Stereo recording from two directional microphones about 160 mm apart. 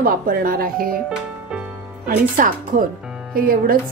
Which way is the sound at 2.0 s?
55° right (ahead or behind).